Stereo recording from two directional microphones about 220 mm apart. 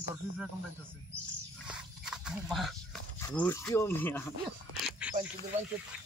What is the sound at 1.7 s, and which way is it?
Pig, 5° right (ahead or behind).